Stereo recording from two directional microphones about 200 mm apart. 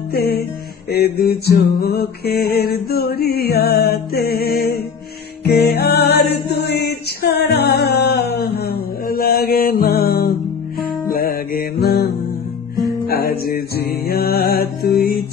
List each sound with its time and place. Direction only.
0.1 s music: 50° left (ahead or behind)